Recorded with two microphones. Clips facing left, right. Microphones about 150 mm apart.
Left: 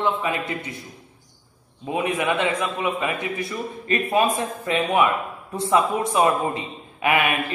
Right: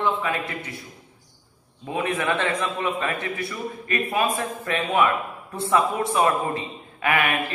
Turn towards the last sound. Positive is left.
turn(degrees=20)  # may be behind; listen again after turning